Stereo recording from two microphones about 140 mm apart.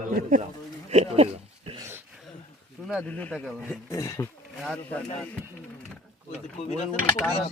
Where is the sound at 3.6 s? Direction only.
20° left (ahead or behind).